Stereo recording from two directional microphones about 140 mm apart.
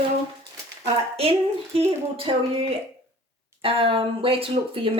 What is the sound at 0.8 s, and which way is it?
A woman's voice, 45° right (ahead or behind).